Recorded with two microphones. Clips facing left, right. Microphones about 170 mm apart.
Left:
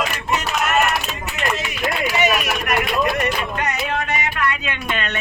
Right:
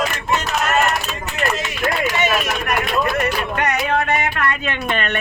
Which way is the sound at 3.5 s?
65° right (ahead or behind).